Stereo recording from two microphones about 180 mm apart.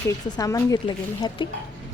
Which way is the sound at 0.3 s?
20° left (ahead or behind).